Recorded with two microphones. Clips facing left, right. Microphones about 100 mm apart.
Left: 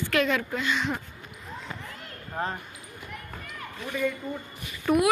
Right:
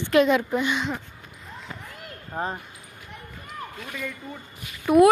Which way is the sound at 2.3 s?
20° right (ahead or behind).